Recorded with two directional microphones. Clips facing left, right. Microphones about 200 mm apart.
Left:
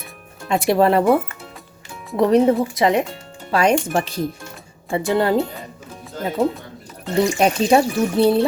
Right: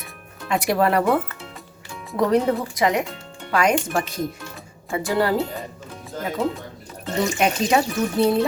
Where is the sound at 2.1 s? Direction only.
20° left (ahead or behind).